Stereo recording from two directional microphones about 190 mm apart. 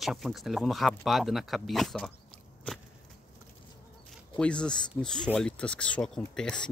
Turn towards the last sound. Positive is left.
turn(degrees=5)  # may be behind; listen again after turning